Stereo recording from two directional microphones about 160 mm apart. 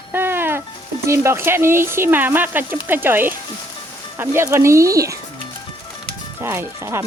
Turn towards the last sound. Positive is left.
turn(degrees=-15)  # may be behind; listen again after turning